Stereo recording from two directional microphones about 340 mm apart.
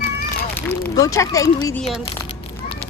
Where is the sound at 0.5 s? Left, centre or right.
Centre.